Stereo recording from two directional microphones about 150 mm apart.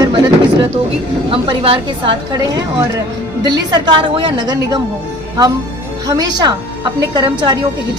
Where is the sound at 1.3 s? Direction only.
35° right (ahead or behind).